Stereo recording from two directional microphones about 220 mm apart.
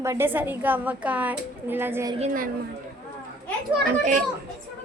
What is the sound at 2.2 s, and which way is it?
Speech, 35° right (ahead or behind).